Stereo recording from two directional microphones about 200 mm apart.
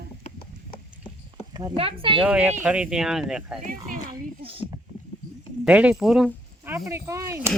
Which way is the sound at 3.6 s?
40° right (ahead or behind).